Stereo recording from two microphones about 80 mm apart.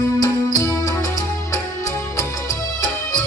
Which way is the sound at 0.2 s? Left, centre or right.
Left.